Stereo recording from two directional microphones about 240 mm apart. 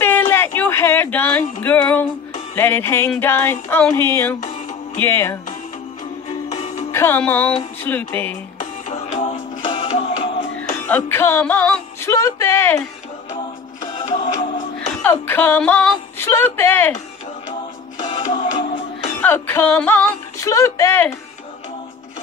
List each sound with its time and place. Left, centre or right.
0.0 s a sound: centre
2.5 s speech: centre
6.9 s speech: centre
8.8 s music: left
10.9 s speech: centre
13.9 s music: centre
15.0 s speech: centre
18.3 s music: centre
19.2 s speech: centre